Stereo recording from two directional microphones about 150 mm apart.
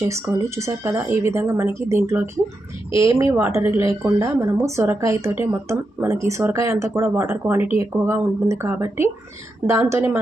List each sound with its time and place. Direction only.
0.0 s a woman's voice: 20° right (ahead or behind)